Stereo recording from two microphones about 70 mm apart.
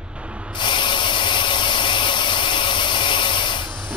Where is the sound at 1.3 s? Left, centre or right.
Left.